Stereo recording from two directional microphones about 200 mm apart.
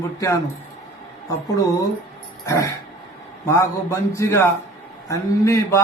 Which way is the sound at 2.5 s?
15° left (ahead or behind).